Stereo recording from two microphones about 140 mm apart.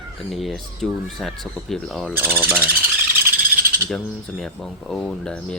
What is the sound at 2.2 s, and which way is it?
Speech, 15° right (ahead or behind).